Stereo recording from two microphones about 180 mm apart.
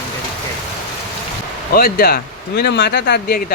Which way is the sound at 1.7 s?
55° left (ahead or behind).